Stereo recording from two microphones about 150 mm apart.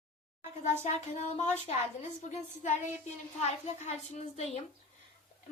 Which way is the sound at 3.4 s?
45° left (ahead or behind).